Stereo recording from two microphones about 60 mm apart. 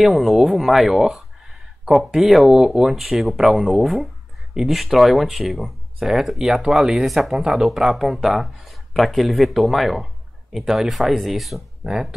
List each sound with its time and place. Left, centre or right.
0.0 s speech: centre